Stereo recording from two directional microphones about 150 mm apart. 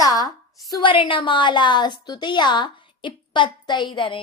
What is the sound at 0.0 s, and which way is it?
A woman's voice, 25° left (ahead or behind).